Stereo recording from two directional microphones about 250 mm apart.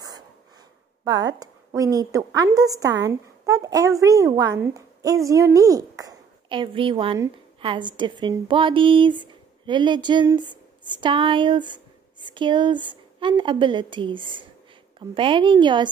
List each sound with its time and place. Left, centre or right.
1.0 s a woman's voice: centre